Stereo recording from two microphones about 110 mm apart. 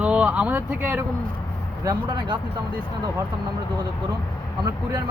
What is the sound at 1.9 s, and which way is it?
Speech, 40° right (ahead or behind).